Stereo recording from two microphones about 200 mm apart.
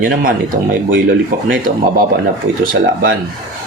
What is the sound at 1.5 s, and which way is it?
Speech, 45° right (ahead or behind).